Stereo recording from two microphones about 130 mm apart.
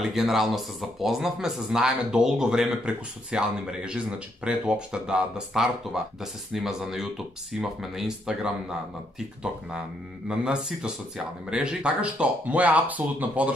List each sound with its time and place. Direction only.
0.1 s speech: centre (ahead or behind)
10.2 s speech: 5° right (ahead or behind)